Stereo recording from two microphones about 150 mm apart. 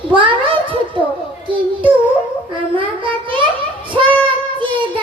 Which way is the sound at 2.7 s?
35° right (ahead or behind).